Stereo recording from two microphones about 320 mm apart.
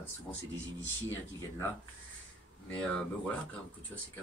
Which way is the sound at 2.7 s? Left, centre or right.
Centre.